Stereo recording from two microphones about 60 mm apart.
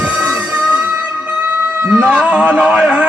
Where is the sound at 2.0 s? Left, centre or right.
Centre.